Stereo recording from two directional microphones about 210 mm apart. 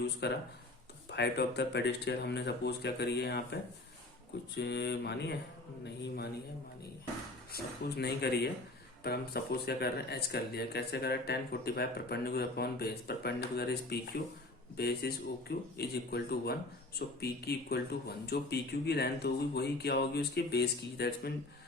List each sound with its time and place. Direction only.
0.2 s a man's voice: 55° left (ahead or behind)
7.5 s a man's voice: 50° left (ahead or behind)
14.8 s a man's voice: 50° left (ahead or behind)